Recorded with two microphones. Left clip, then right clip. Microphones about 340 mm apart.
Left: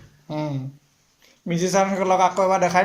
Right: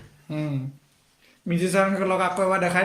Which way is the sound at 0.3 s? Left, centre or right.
Centre.